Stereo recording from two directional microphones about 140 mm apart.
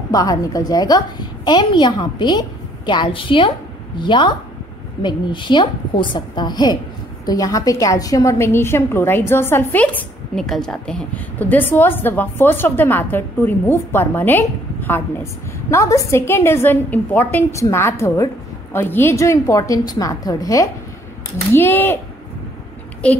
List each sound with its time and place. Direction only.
0.1 s a woman's voice: 25° left (ahead or behind)
10.3 s a woman's voice: 5° left (ahead or behind)